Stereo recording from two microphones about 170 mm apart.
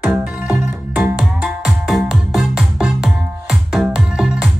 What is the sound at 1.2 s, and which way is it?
Music, centre (ahead or behind).